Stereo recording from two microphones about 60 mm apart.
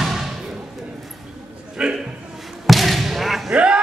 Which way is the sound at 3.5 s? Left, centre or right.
Centre.